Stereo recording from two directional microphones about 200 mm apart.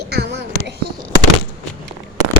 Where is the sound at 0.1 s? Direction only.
55° right (ahead or behind).